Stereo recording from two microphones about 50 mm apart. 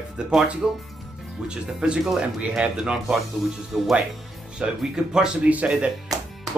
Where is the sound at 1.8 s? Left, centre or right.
Centre.